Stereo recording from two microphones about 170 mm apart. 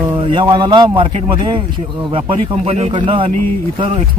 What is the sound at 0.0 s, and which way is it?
Speech, 30° right (ahead or behind).